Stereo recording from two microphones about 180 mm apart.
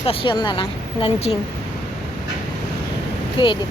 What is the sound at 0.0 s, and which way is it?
Speech, 30° left (ahead or behind).